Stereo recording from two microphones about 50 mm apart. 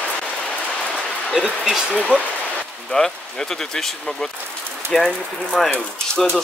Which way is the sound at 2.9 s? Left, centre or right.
Centre.